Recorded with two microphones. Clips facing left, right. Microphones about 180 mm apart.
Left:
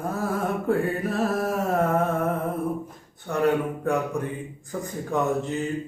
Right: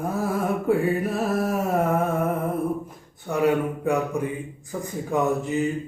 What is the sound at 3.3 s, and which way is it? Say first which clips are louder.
Speech: right 1 dB; 10° right (ahead or behind).